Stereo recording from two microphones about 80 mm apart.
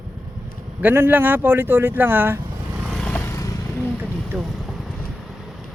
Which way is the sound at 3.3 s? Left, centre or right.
Left.